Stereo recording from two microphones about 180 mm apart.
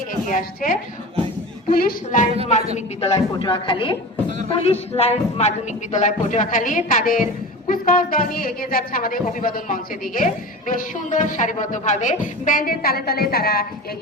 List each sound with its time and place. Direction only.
0.3 s a woman's voice: 50° left (ahead or behind)
2.7 s a woman's voice: 35° left (ahead or behind); by 13.7 s 60° left (ahead or behind)